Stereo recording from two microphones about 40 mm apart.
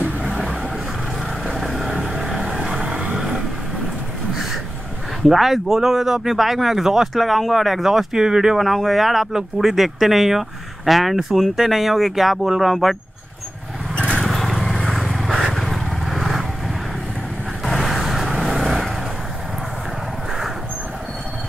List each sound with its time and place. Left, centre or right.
0.0 s vehicle: centre
2.9 s vehicle: right
3.2 s vehicle: centre
5.3 s speech: centre
7.2 s speech: centre
8.5 s speech: centre
14.2 s vehicle: centre
17.6 s vehicle: centre